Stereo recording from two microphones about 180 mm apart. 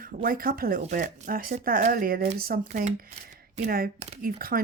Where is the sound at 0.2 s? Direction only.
55° right (ahead or behind).